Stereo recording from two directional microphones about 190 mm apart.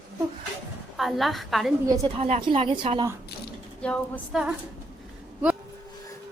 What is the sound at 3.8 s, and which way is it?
Speech, centre (ahead or behind).